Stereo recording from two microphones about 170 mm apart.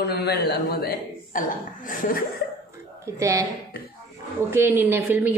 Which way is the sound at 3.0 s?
15° right (ahead or behind).